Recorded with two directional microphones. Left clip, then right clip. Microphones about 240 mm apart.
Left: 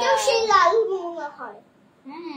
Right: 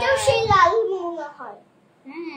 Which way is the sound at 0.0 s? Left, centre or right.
Centre.